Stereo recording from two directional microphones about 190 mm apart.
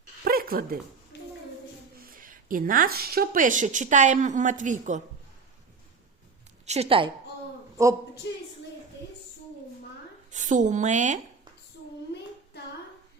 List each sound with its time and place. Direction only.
0.3 s a sound: 50° right (ahead or behind)
1.1 s a sound: 60° left (ahead or behind)
2.0 s a woman's voice: 45° right (ahead or behind)
6.7 s a woman's voice: 30° right (ahead or behind)
7.8 s a woman's voice: 15° right (ahead or behind)
8.2 s a woman's voice: 70° left (ahead or behind)
10.3 s a woman's voice: 40° right (ahead or behind)